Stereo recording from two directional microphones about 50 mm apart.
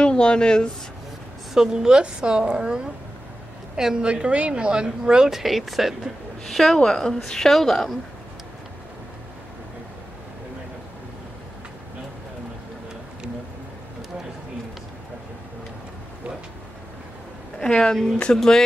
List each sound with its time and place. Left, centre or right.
0.0 s speech: centre
1.5 s a woman's voice: centre
17.6 s a woman's voice: centre